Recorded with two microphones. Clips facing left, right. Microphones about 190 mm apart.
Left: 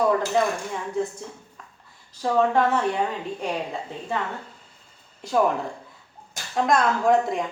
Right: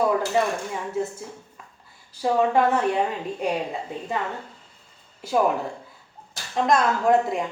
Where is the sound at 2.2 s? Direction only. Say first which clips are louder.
Even; 10° right (ahead or behind).